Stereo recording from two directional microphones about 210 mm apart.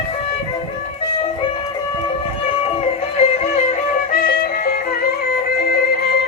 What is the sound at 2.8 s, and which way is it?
Music, 30° left (ahead or behind).